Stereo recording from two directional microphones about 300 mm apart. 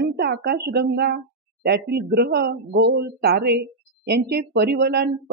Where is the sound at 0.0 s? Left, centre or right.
Right.